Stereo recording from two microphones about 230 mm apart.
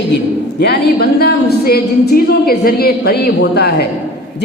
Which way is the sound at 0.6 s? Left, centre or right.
Left.